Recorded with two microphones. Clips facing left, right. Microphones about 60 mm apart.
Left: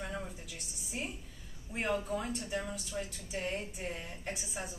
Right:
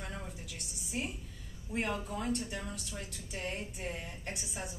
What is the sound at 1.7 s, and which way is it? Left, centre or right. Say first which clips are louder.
A woman's voice: left 2 dB; centre.